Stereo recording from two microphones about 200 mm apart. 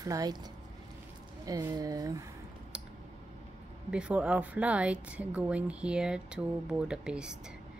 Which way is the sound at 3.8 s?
5° right (ahead or behind).